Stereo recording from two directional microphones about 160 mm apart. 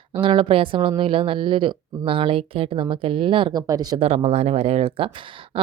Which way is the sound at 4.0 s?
40° right (ahead or behind).